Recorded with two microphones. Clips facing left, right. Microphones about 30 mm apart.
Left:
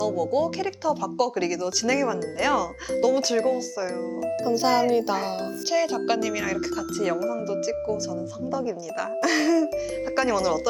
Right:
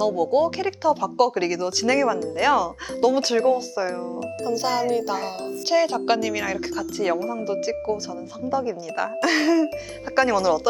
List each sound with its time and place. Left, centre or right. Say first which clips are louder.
0.0 s speech: right 4 dB; centre
4.4 s a child's voice: left 1 dB; centre
5.6 s speech: right 4 dB; right
10.2 s speech: right 4 dB; centre